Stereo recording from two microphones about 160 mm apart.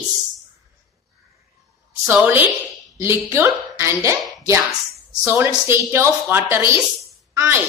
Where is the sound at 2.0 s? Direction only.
10° right (ahead or behind).